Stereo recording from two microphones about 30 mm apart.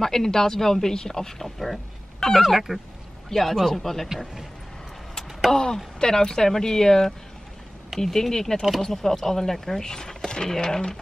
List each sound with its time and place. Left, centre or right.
0.0 s speech: centre
2.1 s a sound: centre
2.4 s speech: centre
3.3 s a man's voice: centre
5.5 s a sound: left
5.9 s speech: left